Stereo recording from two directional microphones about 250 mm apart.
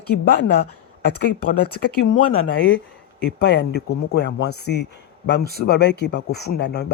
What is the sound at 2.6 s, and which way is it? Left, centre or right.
Speech, left.